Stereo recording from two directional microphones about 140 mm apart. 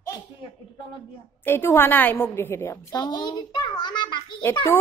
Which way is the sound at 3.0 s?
30° left (ahead or behind).